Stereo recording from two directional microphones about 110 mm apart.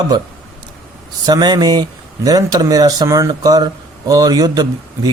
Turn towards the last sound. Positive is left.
turn(degrees=-35)  # may be behind; listen again after turning